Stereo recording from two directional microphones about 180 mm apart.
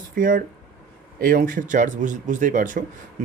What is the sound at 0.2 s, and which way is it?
Speech, 50° right (ahead or behind).